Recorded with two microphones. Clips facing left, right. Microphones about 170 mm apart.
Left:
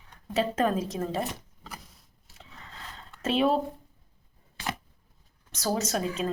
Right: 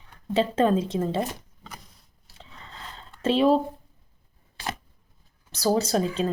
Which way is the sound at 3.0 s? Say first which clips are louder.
Right 4 dB; 30° right (ahead or behind).